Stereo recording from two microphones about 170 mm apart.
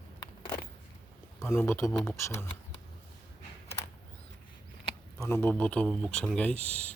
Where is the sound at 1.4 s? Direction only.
15° left (ahead or behind).